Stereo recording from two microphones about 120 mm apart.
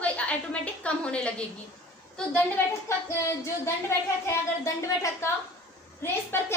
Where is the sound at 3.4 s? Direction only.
20° left (ahead or behind).